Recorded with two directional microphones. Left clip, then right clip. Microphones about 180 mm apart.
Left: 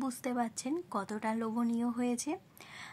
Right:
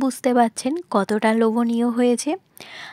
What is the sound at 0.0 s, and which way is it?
Speech, 45° right (ahead or behind).